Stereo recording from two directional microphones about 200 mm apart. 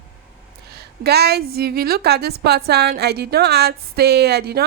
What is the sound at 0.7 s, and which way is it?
A woman's voice, 55° right (ahead or behind).